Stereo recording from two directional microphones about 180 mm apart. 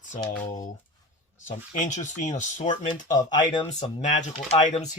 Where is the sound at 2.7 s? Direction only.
25° left (ahead or behind).